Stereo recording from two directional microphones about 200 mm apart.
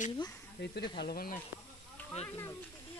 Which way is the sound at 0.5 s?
55° left (ahead or behind).